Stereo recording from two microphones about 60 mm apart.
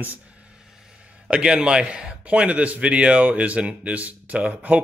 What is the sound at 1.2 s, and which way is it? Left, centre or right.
A man's voice, centre.